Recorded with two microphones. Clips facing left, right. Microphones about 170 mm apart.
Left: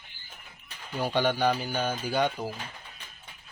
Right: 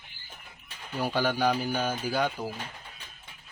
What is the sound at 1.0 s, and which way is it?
Speech, 5° right (ahead or behind).